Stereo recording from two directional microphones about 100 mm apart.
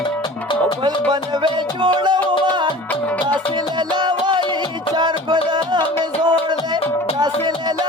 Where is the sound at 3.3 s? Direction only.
45° right (ahead or behind).